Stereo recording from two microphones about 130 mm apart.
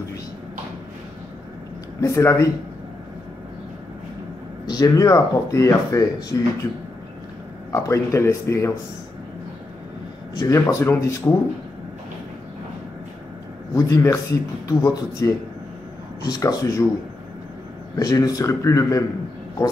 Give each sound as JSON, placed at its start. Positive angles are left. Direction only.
{"t": 2.0, "sound": "speech", "side_deg": 25}
{"t": 4.6, "sound": "speech", "side_deg": 30}
{"t": 7.7, "sound": "speech", "side_deg": 25}
{"t": 10.3, "sound": "speech", "side_deg": 25}
{"t": 13.7, "sound": "speech", "side_deg": 25}
{"t": 17.9, "sound": "speech", "side_deg": 30}